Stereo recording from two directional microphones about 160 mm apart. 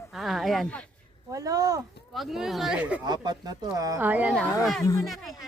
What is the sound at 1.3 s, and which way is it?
Speech, 20° right (ahead or behind).